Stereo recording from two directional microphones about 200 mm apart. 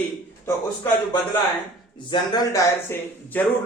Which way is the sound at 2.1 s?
20° left (ahead or behind).